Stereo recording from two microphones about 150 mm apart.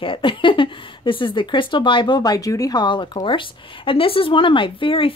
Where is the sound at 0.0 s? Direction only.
35° left (ahead or behind).